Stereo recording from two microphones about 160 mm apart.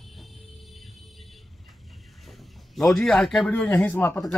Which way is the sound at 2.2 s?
Centre (ahead or behind).